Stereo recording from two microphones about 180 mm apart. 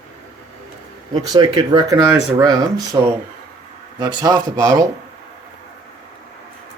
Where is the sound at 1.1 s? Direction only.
20° right (ahead or behind).